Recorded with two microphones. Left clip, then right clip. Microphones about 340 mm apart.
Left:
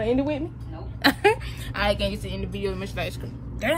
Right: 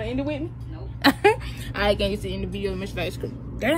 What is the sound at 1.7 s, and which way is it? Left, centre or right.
A woman's voice, centre.